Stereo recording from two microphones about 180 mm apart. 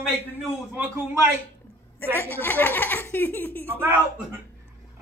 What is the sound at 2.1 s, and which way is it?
Speech, 10° left (ahead or behind).